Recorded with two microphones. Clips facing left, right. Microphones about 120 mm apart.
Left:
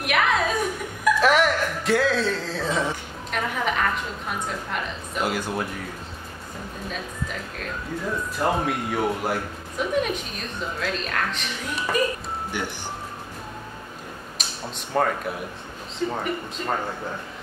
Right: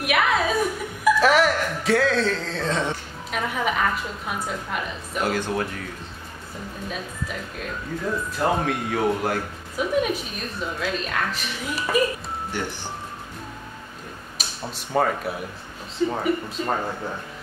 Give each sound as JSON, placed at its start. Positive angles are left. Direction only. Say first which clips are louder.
{"t": 0.0, "sound": "music", "louder": "right 1 dB", "side_deg": -5}
{"t": 1.0, "sound": "a sound", "louder": "right 1 dB", "side_deg": 0}
{"t": 3.3, "sound": "a woman's voice", "louder": "right 1 dB", "side_deg": -5}
{"t": 5.2, "sound": "speech", "louder": "right 2 dB", "side_deg": 10}
{"t": 8.4, "sound": "speech", "louder": "even", "side_deg": 5}
{"t": 9.8, "sound": "a woman's voice", "louder": "right 1 dB", "side_deg": -5}
{"t": 14.4, "sound": "a sound", "louder": "right 1 dB", "side_deg": -5}
{"t": 15.0, "sound": "a woman's voice", "louder": "right 1 dB", "side_deg": -5}